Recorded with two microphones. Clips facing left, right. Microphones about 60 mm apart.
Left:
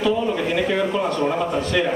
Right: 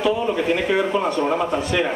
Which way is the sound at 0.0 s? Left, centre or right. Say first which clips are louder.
Even; centre.